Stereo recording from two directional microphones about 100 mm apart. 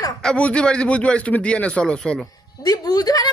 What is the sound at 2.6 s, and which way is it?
Speech, 40° left (ahead or behind).